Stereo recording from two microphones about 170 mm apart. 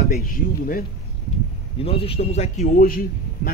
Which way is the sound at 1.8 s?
35° left (ahead or behind).